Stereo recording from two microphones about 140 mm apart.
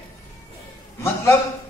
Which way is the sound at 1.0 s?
20° left (ahead or behind).